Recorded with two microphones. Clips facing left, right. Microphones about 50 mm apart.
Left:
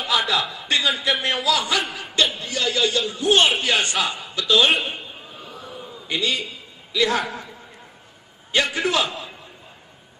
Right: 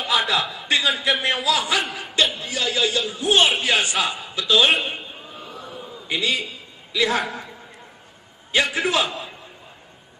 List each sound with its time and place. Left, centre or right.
0.2 s a man's voice: centre
1.2 s a man's voice: centre
1.8 s chuckle: centre
2.4 s a man's voice: centre
4.9 s a sound: centre
6.0 s a man's voice: centre
8.5 s a man's voice: centre